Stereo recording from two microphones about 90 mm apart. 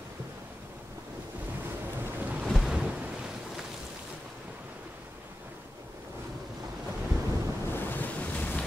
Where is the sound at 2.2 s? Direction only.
20° right (ahead or behind).